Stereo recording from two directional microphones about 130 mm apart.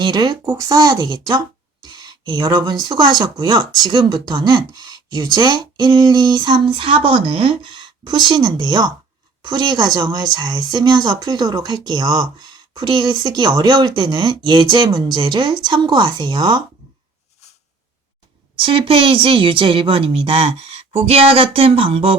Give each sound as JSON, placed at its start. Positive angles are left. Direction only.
{"t": 0.0, "sound": "speech", "side_deg": -35}
{"t": 18.5, "sound": "a woman's voice", "side_deg": -40}